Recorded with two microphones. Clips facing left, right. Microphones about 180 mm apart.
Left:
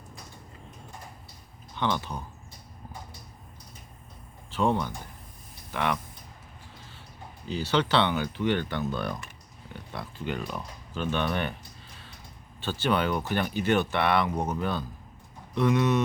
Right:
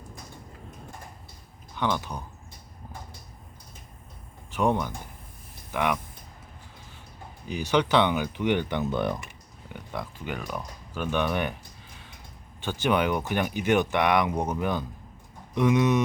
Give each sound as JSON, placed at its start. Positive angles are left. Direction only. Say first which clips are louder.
{"t": 1.8, "sound": "speech", "louder": "right 1 dB", "side_deg": -10}
{"t": 4.5, "sound": "speech", "louder": "right 1 dB", "side_deg": -15}
{"t": 7.4, "sound": "speech", "louder": "right 2 dB", "side_deg": -15}
{"t": 10.2, "sound": "speech", "louder": "left 5 dB", "side_deg": -10}